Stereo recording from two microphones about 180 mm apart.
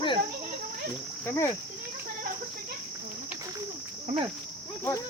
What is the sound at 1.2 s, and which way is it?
Speech, 15° left (ahead or behind).